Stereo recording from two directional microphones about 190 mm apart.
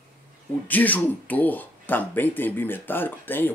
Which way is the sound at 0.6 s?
10° left (ahead or behind).